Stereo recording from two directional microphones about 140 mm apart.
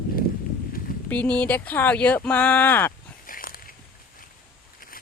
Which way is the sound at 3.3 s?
90° left.